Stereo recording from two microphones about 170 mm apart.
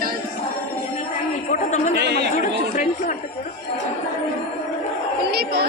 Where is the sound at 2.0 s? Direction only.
75° right (ahead or behind).